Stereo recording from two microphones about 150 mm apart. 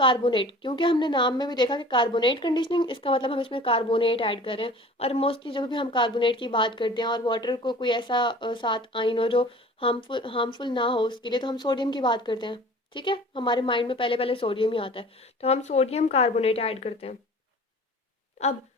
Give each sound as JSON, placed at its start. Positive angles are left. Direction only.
{"t": 0.0, "sound": "a woman's voice", "side_deg": 35}